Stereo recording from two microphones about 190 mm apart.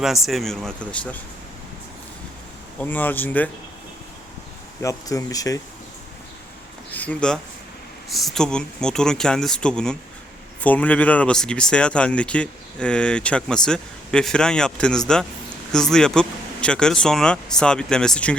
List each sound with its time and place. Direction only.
0.0 s speech: centre (ahead or behind)
2.7 s speech: 10° left (ahead or behind)
4.8 s speech: 15° left (ahead or behind)
6.9 s speech: 10° left (ahead or behind)